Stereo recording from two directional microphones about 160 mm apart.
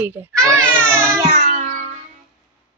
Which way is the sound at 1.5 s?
55° right (ahead or behind).